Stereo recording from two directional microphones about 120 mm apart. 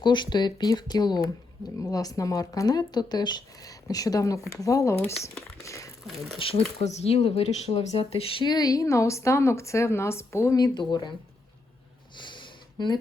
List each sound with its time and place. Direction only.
0.0 s speech: 40° left (ahead or behind)
6.4 s speech: 50° left (ahead or behind)
6.8 s speech: 60° left (ahead or behind); by 11.1 s 35° left (ahead or behind)
12.1 s a sound: 40° left (ahead or behind)